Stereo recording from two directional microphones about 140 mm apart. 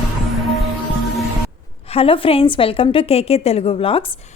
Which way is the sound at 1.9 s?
40° left (ahead or behind).